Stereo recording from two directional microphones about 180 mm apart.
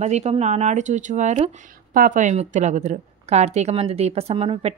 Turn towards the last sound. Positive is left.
turn(degrees=-30)  # may be behind; listen again after turning